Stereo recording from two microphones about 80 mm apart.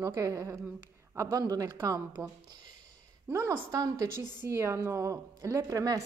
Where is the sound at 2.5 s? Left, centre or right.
Right.